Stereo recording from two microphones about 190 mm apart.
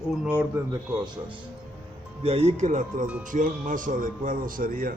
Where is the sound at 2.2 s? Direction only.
30° right (ahead or behind); by 4.9 s 50° right (ahead or behind).